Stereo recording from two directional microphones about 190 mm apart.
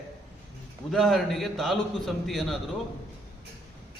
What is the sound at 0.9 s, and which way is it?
A man's voice, centre (ahead or behind).